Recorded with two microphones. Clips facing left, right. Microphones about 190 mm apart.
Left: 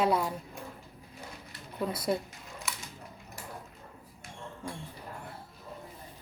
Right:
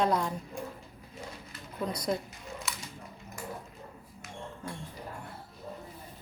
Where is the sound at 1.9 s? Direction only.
5° left (ahead or behind).